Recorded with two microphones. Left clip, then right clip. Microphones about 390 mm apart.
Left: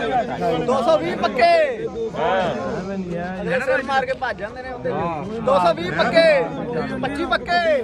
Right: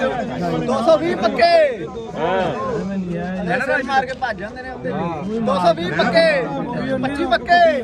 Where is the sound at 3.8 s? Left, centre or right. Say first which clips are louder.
Right 2 dB; centre.